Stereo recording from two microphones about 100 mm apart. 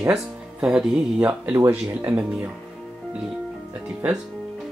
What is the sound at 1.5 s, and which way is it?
Speech, 20° right (ahead or behind).